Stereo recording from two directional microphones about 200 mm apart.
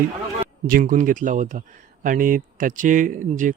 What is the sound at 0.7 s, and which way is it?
Speech, 45° right (ahead or behind).